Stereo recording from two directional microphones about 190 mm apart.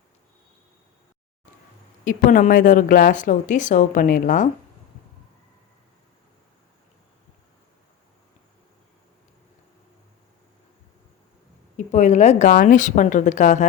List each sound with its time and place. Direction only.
2.0 s a woman's voice: 45° left (ahead or behind)
11.9 s a woman's voice: 35° left (ahead or behind)